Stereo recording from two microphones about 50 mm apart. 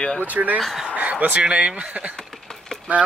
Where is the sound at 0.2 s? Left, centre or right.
Right.